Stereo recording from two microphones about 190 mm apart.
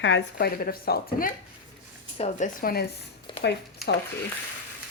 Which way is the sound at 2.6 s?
50° left (ahead or behind).